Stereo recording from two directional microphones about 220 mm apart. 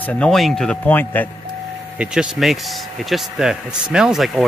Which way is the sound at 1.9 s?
5° right (ahead or behind).